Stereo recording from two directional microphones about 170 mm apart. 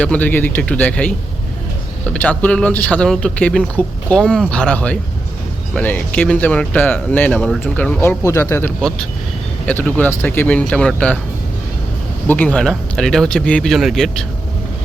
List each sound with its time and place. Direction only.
0.0 s speech: 10° left (ahead or behind)
12.3 s speech: 10° left (ahead or behind)